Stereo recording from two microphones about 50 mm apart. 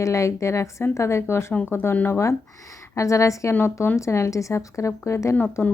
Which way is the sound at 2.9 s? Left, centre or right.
Left.